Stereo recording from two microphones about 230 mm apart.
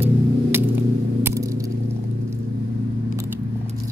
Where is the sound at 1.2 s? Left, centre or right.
Centre.